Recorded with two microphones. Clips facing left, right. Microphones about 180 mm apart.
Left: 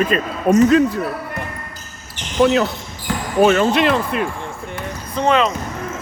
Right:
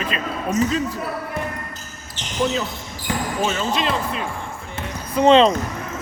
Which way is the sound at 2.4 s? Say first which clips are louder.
Left 7 dB; 70° left (ahead or behind).